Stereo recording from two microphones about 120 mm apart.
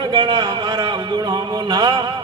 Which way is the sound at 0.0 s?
40° right (ahead or behind).